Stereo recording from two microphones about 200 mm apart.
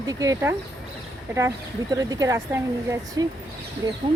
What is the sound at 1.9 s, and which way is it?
Speech, 20° right (ahead or behind).